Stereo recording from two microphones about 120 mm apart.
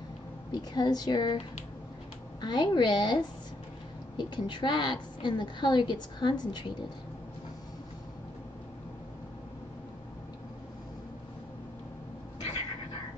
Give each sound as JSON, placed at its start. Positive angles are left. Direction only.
{"t": 0.5, "sound": "a woman's voice", "side_deg": 35}
{"t": 2.4, "sound": "a woman's voice", "side_deg": 35}